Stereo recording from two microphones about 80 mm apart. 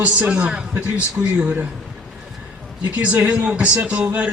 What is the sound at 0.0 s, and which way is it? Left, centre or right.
A man's voice, centre.